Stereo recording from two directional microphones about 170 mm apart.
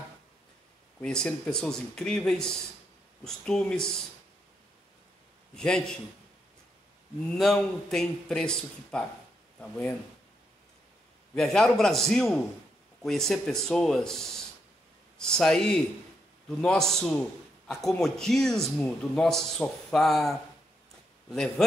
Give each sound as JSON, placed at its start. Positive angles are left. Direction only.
{"t": 1.0, "sound": "a man's voice", "side_deg": 5}
{"t": 5.6, "sound": "a man's voice", "side_deg": 5}
{"t": 7.3, "sound": "a man's voice", "side_deg": 0}
{"t": 11.3, "sound": "a man's voice", "side_deg": 5}